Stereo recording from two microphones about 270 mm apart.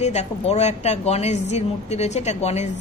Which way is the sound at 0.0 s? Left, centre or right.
Left.